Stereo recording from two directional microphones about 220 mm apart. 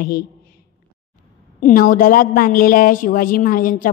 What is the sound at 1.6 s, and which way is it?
A woman's voice, 40° left (ahead or behind).